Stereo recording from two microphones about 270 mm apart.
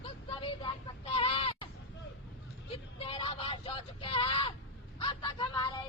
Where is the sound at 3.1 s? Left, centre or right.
Centre.